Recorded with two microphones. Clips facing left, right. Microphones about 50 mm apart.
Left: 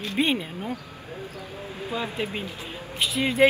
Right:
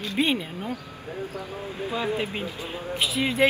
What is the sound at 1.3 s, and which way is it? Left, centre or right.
Speech, right.